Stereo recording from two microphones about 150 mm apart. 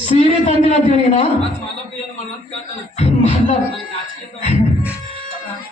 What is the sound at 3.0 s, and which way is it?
Beatboxing, 50° left (ahead or behind).